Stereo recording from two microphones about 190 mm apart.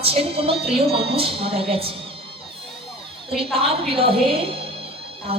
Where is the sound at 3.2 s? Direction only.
30° right (ahead or behind).